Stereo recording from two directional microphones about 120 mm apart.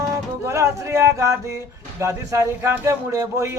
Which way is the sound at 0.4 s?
25° right (ahead or behind).